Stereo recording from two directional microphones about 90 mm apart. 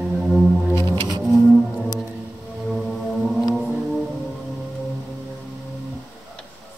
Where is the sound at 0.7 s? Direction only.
30° left (ahead or behind).